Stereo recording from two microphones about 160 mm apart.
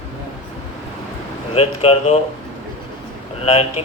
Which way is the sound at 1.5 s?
35° left (ahead or behind).